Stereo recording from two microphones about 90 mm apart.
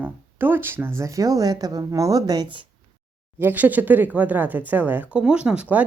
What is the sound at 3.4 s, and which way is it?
Speech, 20° right (ahead or behind).